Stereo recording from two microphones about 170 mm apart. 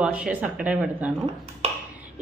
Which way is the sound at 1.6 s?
40° right (ahead or behind).